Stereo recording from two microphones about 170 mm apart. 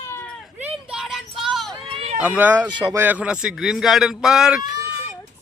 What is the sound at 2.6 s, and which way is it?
Speech, 25° right (ahead or behind).